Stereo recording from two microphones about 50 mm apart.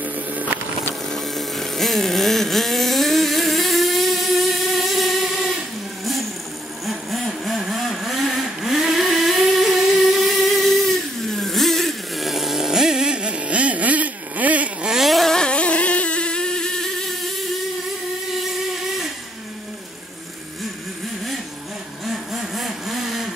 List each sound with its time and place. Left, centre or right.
0.0 s music: right
1.0 s a sound: centre
6.9 s vehicle: centre; by 14.9 s right
14.9 s a sound: centre
15.3 s motorboat: left
22.0 s vehicle: centre